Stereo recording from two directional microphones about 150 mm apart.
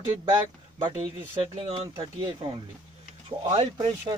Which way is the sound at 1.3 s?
40° right (ahead or behind).